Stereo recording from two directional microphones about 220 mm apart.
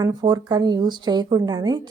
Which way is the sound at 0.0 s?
20° right (ahead or behind).